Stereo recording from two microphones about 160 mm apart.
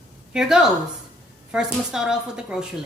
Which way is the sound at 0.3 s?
5° right (ahead or behind).